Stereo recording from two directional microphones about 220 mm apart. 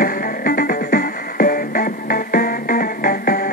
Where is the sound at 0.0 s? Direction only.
40° left (ahead or behind).